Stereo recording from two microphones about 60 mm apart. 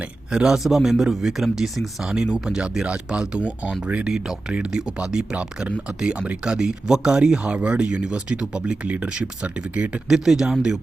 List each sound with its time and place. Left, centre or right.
0.0 s speech: centre
4.1 s speech: centre
10.2 s speech: centre